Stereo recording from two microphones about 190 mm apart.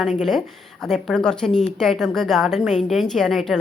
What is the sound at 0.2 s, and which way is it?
A woman's voice, centre (ahead or behind).